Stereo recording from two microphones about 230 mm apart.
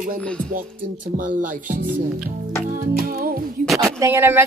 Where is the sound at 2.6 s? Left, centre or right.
Right.